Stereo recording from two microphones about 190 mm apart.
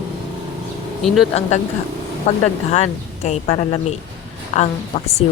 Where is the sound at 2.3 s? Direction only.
35° left (ahead or behind).